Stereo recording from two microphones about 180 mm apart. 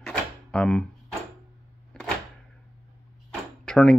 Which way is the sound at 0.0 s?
5° left (ahead or behind).